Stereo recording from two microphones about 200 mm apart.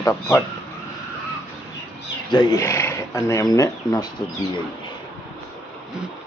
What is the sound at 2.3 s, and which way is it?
Speech, 15° left (ahead or behind).